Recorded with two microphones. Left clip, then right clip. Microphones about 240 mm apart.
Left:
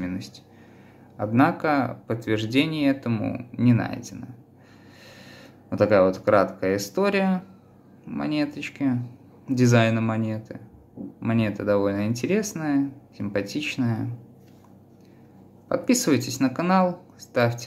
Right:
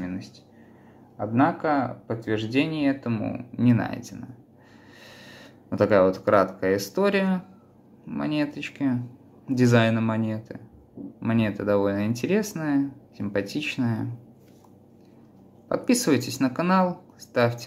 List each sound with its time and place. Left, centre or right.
0.0 s a sound: centre
1.1 s speech: centre
15.7 s speech: centre